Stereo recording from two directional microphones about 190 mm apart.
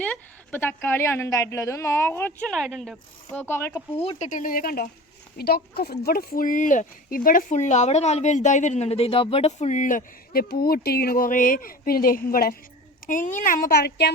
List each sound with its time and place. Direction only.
0.0 s a woman's voice: 10° left (ahead or behind)
4.2 s speech: 45° left (ahead or behind)